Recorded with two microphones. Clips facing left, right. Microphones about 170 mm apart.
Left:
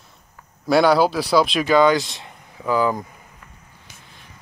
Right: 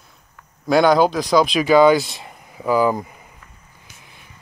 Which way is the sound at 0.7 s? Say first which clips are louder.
Right 1 dB; 5° left (ahead or behind).